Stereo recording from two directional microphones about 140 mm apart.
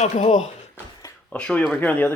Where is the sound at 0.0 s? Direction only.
60° left (ahead or behind).